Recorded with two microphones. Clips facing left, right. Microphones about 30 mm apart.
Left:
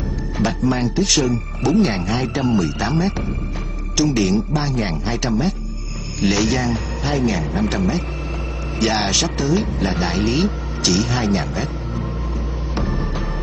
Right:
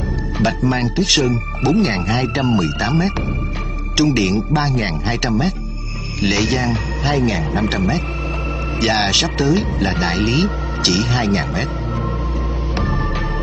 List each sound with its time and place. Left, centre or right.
0.4 s speech: right
6.2 s a man's voice: centre
9.1 s speech: right
9.9 s speech: right
10.4 s speech: right
11.2 s speech: right